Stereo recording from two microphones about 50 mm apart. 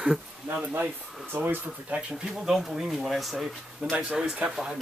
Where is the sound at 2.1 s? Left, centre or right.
Centre.